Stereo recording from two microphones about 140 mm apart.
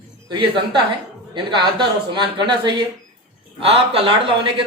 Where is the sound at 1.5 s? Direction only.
35° right (ahead or behind).